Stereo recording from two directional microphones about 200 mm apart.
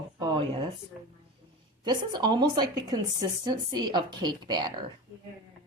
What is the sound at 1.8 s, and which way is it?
A woman's voice, 20° right (ahead or behind).